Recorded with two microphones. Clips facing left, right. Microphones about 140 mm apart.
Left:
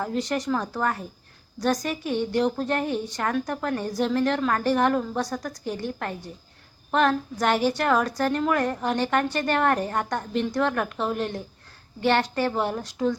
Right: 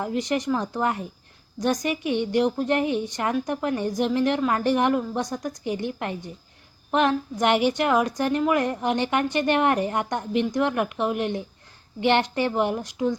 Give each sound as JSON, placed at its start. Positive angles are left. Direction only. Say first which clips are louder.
{"t": 0.0, "sound": "a woman's voice", "louder": "right 1 dB", "side_deg": -15}